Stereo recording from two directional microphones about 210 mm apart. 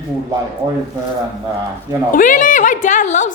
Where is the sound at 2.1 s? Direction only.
40° left (ahead or behind).